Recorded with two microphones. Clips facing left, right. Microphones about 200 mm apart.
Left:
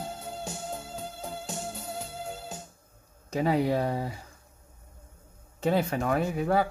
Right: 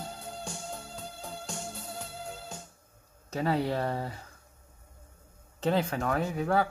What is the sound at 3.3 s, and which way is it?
Speech, 15° left (ahead or behind).